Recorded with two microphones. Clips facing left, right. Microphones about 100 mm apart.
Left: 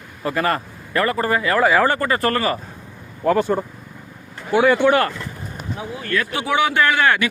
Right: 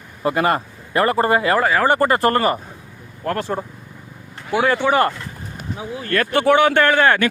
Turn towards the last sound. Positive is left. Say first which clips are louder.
# right 2 dB
turn(degrees=-45)  # may be behind; listen again after turning